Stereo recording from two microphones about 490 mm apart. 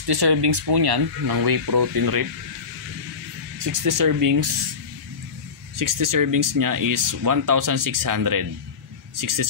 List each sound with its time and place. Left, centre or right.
0.0 s speech: right
3.5 s speech: right
5.8 s speech: right